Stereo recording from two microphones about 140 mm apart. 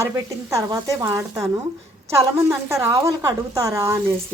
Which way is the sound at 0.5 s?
25° right (ahead or behind).